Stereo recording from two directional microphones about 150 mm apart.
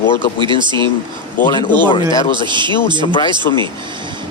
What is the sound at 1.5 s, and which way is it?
Speech, 30° left (ahead or behind).